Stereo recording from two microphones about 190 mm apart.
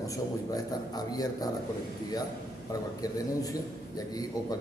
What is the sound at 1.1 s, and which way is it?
Speech, 20° left (ahead or behind).